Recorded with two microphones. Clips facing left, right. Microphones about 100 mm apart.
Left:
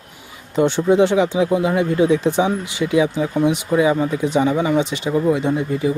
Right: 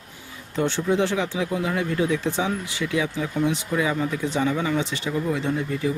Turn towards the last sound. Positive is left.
turn(degrees=15)  # may be behind; listen again after turning